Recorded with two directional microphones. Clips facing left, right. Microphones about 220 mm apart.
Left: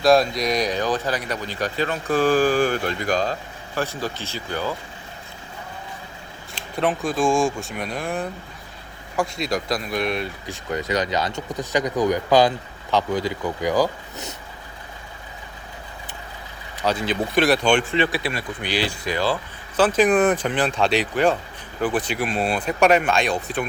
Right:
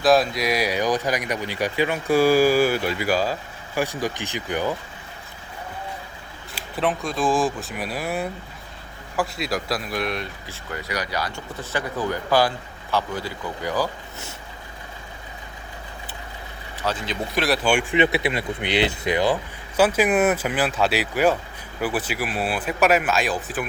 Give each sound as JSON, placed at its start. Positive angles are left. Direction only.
{"t": 0.0, "sound": "speech", "side_deg": 0}
{"t": 6.6, "sound": "speech", "side_deg": 0}
{"t": 10.4, "sound": "speech", "side_deg": 20}
{"t": 16.8, "sound": "speech", "side_deg": 15}
{"t": 17.3, "sound": "speech", "side_deg": 0}
{"t": 17.9, "sound": "speech", "side_deg": -20}